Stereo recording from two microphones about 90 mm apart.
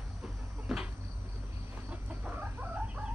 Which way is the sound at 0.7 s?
Centre (ahead or behind).